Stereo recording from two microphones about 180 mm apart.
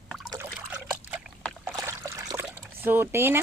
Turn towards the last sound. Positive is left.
turn(degrees=-15)  # may be behind; listen again after turning